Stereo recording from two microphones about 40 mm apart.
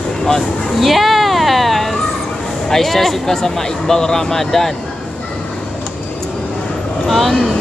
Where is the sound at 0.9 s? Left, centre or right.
Centre.